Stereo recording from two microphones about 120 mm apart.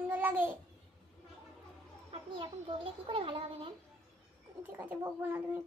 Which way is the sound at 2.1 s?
50° right (ahead or behind).